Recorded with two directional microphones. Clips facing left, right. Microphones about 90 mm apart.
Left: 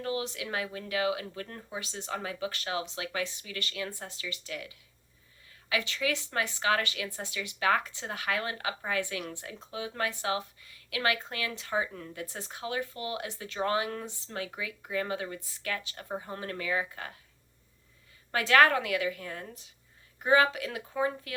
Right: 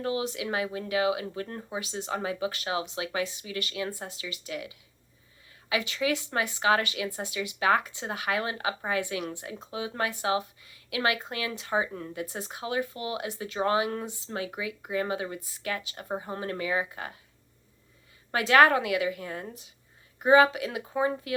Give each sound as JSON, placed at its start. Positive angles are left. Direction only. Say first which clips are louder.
{"t": 0.0, "sound": "a woman's voice", "louder": "right 4 dB", "side_deg": -20}
{"t": 18.3, "sound": "a woman's voice", "louder": "right 3 dB", "side_deg": -20}